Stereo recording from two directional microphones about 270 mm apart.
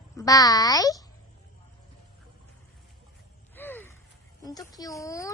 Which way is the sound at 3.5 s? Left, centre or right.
Centre.